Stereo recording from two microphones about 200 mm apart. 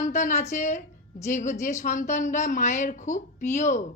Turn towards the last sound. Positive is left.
turn(degrees=35)  # may be behind; listen again after turning